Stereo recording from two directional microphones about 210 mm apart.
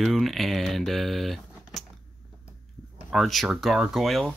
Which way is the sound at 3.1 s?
Centre (ahead or behind).